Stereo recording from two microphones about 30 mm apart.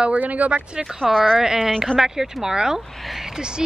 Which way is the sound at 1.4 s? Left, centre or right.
Centre.